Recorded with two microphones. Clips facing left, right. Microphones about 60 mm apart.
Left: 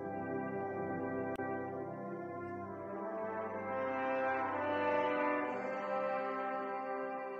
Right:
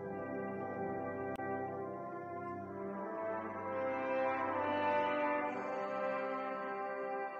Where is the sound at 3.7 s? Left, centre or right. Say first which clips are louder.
Even; left.